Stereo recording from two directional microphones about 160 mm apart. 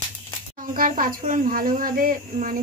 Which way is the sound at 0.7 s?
60° right (ahead or behind).